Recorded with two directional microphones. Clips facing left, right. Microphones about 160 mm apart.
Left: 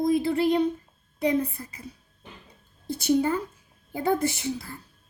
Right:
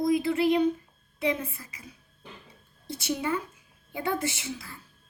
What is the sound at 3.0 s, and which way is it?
A woman's voice, 40° left (ahead or behind).